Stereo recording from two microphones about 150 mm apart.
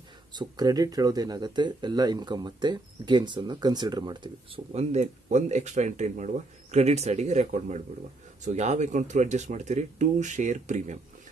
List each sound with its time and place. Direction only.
0.3 s speech: 25° right (ahead or behind)
4.7 s speech: 45° right (ahead or behind)